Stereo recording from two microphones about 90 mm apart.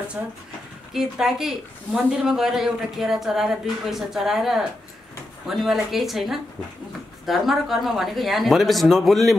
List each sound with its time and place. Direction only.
0.2 s speech: 15° right (ahead or behind)
0.9 s a woman's voice: 5° right (ahead or behind)